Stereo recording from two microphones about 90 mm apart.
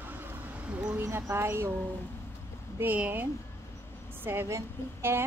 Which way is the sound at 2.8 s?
20° right (ahead or behind).